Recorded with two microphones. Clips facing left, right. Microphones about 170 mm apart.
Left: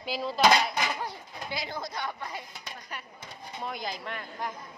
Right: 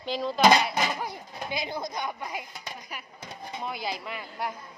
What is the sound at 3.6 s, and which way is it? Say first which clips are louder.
Speech: right 1 dB; 5° right (ahead or behind).